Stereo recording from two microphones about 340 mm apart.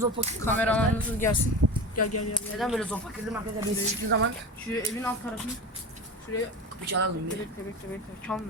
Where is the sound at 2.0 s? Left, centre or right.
Left.